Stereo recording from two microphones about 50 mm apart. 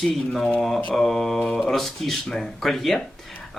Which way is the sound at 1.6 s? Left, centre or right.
Centre.